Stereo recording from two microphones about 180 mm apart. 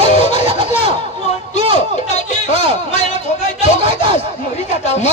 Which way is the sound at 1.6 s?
30° right (ahead or behind).